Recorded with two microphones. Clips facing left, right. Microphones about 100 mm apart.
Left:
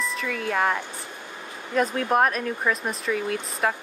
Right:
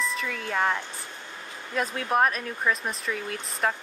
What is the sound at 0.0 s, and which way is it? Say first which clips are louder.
Speech: left 2 dB; centre (ahead or behind).